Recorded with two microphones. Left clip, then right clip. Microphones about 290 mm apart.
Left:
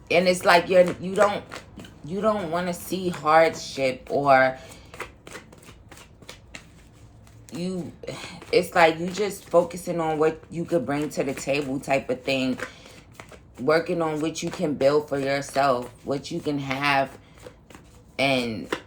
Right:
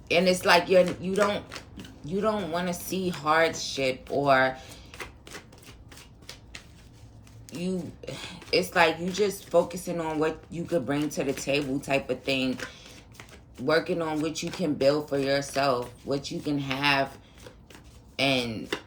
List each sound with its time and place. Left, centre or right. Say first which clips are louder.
0.1 s speech: left 3 dB; centre
8.1 s a woman's voice: left 4 dB; centre
13.7 s speech: left 3 dB; centre
18.2 s speech: left 3 dB; centre